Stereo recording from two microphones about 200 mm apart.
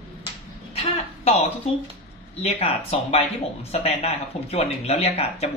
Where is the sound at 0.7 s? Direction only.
30° left (ahead or behind).